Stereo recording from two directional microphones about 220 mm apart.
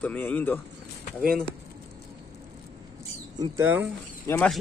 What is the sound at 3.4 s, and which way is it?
Speech, 10° right (ahead or behind).